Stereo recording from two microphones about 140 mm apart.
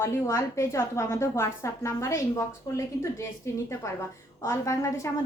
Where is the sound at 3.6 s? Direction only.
20° left (ahead or behind).